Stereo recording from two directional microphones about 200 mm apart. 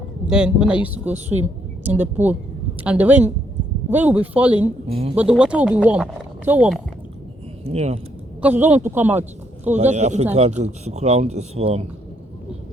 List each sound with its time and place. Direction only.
0.3 s speech: 5° right (ahead or behind)
1.1 s speech: 35° right (ahead or behind)
1.8 s a man's voice: 10° right (ahead or behind)
4.9 s speech: 30° right (ahead or behind)
5.1 s speech: 5° right (ahead or behind)
7.7 s speech: 30° right (ahead or behind)
8.4 s a man's voice: 10° right (ahead or behind)
9.7 s speech: 35° right (ahead or behind)